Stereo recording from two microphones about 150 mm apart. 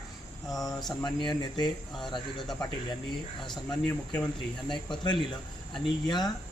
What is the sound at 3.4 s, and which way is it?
Speech, centre (ahead or behind).